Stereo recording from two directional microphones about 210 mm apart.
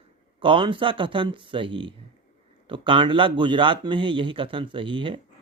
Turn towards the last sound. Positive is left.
turn(degrees=-25)  # may be behind; listen again after turning